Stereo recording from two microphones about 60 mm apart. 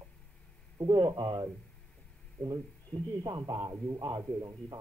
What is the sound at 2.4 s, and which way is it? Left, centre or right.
A man's voice, right.